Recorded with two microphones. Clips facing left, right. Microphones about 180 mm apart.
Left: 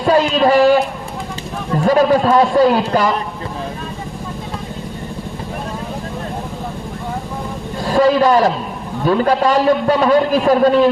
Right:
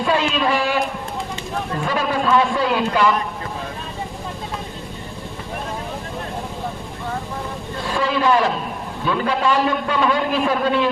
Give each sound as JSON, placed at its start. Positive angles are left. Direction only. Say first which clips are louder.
{"t": 0.0, "sound": "speech", "louder": "left 6 dB", "side_deg": 40}
{"t": 1.8, "sound": "a man's voice", "louder": "left 10 dB", "side_deg": 40}
{"t": 7.9, "sound": "a man's voice", "louder": "left 7 dB", "side_deg": 40}